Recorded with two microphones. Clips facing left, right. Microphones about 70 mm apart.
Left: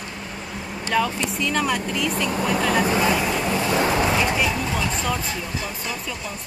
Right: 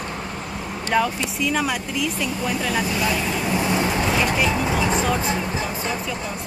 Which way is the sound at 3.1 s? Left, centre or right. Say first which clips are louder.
Left 2 dB; centre.